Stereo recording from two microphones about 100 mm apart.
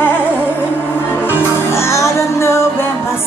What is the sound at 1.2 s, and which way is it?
Music, 25° left (ahead or behind).